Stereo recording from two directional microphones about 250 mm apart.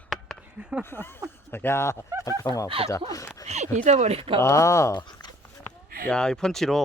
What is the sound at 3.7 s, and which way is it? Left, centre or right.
Speech, right.